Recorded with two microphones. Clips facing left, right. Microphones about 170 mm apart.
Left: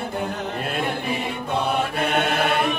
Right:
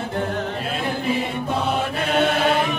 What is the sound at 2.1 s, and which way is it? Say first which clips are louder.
Chant: right 5 dB; 55° left (ahead or behind).